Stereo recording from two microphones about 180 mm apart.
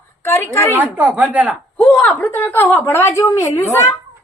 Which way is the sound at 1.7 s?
10° left (ahead or behind).